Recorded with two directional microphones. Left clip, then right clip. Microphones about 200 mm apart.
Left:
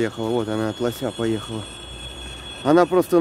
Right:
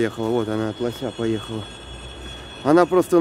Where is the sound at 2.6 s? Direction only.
5° left (ahead or behind).